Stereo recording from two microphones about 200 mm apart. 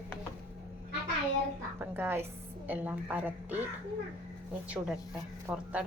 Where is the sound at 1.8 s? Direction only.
10° right (ahead or behind).